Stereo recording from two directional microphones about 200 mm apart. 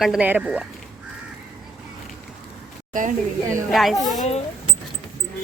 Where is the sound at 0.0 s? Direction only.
5° right (ahead or behind).